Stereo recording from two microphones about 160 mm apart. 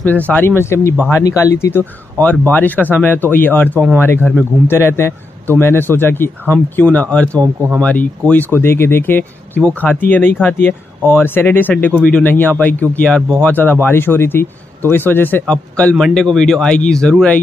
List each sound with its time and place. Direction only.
0.0 s speech: 10° left (ahead or behind)
7.3 s speech: 15° right (ahead or behind)
7.8 s speech: 10° left (ahead or behind)